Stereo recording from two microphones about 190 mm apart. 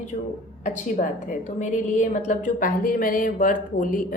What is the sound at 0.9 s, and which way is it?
A woman's voice, 40° left (ahead or behind).